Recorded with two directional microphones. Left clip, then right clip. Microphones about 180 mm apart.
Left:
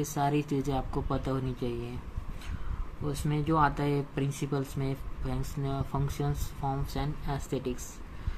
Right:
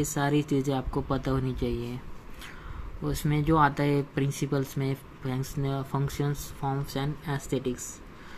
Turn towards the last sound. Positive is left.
turn(degrees=-20)  # may be behind; listen again after turning